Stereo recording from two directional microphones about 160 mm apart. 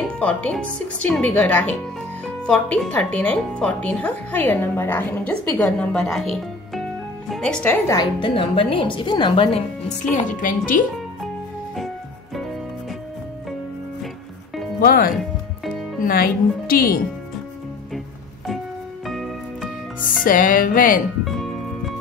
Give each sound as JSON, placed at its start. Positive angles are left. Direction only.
{"t": 0.2, "sound": "speech", "side_deg": 5}
{"t": 7.9, "sound": "a woman's voice", "side_deg": 30}
{"t": 10.1, "sound": "speech", "side_deg": 55}
{"t": 14.8, "sound": "speech", "side_deg": 65}
{"t": 19.0, "sound": "music", "side_deg": 0}
{"t": 20.2, "sound": "speech", "side_deg": 60}
{"t": 21.2, "sound": "music", "side_deg": 0}